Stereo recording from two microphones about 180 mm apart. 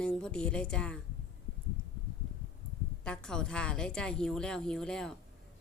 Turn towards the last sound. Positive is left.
turn(degrees=5)  # may be behind; listen again after turning